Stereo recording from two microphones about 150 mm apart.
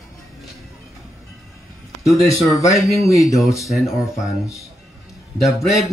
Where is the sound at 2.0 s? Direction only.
20° left (ahead or behind).